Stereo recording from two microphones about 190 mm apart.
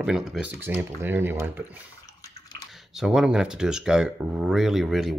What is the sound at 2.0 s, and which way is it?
Bathtub, 20° left (ahead or behind).